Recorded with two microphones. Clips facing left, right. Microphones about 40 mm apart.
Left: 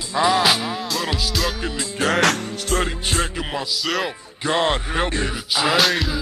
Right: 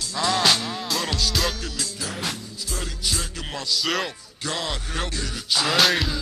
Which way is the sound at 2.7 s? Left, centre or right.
Left.